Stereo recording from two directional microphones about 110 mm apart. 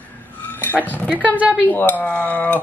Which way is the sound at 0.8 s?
15° left (ahead or behind).